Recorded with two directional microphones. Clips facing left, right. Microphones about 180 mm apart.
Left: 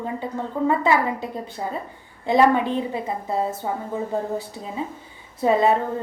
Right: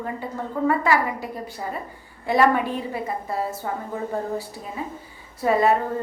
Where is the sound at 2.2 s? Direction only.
20° left (ahead or behind).